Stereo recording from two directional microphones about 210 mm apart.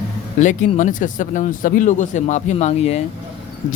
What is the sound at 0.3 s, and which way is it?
Speech, 35° left (ahead or behind).